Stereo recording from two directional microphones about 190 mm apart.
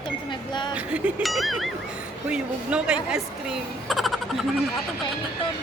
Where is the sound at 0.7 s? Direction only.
5° right (ahead or behind).